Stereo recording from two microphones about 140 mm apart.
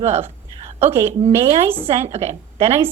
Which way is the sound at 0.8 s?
45° right (ahead or behind).